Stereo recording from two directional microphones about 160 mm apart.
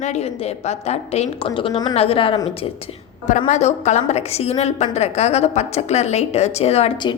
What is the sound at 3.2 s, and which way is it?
A woman's voice, 50° left (ahead or behind).